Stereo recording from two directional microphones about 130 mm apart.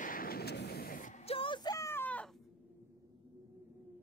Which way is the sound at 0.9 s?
80° left.